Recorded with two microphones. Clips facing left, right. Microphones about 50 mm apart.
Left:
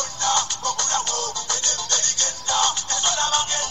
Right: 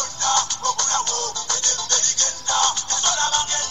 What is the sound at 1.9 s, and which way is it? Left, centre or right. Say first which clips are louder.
Music: right 1 dB; left.